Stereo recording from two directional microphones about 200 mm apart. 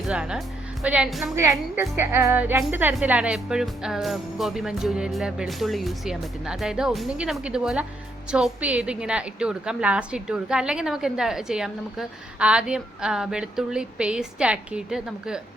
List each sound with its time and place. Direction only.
0.1 s a woman's voice: 5° right (ahead or behind)
1.4 s a woman's voice: 15° right (ahead or behind)